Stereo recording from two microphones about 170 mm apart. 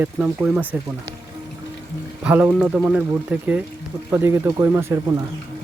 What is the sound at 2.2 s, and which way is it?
Speech, 10° right (ahead or behind).